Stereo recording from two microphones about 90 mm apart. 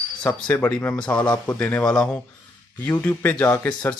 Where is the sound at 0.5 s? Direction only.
20° left (ahead or behind).